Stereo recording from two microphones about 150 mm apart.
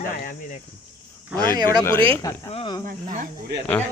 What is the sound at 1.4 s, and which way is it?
Speech, 25° right (ahead or behind).